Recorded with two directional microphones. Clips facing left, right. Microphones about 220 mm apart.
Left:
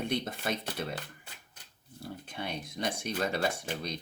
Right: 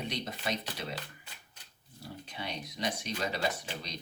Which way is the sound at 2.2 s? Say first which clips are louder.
Left 2 dB; 50° left (ahead or behind).